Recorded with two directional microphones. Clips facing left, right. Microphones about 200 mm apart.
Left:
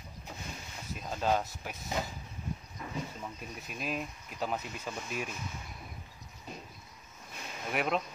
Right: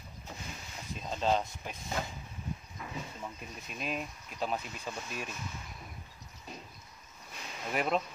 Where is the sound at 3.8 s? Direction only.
5° left (ahead or behind).